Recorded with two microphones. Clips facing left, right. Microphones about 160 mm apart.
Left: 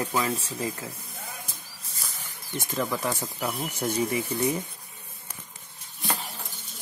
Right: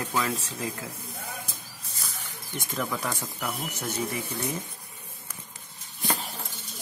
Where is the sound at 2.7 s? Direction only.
5° left (ahead or behind).